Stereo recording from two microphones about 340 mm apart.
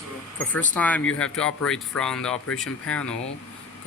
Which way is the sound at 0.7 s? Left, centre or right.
Centre.